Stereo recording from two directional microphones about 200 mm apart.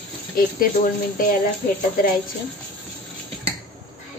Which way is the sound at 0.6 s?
45° left (ahead or behind).